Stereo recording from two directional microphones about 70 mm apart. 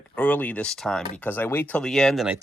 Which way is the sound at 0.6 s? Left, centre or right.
Centre.